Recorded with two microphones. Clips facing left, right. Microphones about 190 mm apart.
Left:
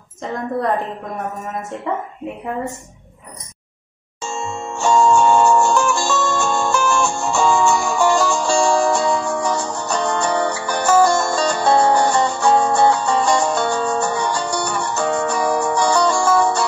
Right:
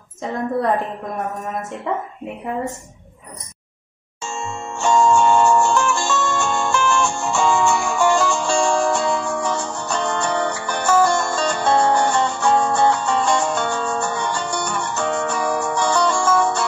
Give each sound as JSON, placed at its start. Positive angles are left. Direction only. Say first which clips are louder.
{"t": 1.9, "sound": "speech", "louder": "even", "side_deg": 0}
{"t": 4.2, "sound": "music", "louder": "left 2 dB", "side_deg": 35}